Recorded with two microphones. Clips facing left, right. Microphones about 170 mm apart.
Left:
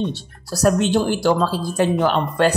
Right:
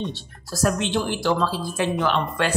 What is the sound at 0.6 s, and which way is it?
Speech, 40° left (ahead or behind).